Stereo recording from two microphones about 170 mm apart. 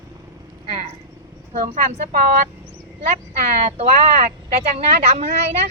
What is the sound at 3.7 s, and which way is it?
Speech, 40° right (ahead or behind).